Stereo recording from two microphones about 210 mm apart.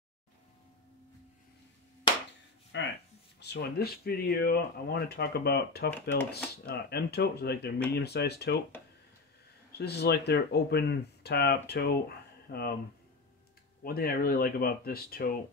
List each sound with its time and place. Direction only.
2.7 s a sound: 60° left (ahead or behind)
3.3 s speech: 50° left (ahead or behind)
5.9 s speech: 10° left (ahead or behind)
6.3 s speech: 50° left (ahead or behind)
9.7 s speech: 50° left (ahead or behind)
13.8 s speech: 45° left (ahead or behind)